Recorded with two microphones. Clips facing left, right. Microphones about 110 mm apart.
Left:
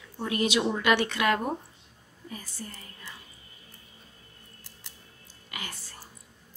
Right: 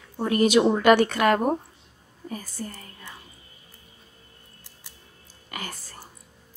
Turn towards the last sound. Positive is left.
turn(degrees=-45)  # may be behind; listen again after turning